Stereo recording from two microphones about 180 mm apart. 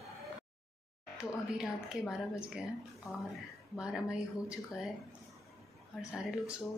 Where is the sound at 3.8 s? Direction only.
5° right (ahead or behind).